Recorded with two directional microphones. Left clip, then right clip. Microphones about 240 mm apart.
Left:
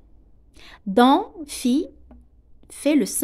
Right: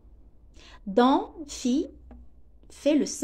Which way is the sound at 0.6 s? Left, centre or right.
Left.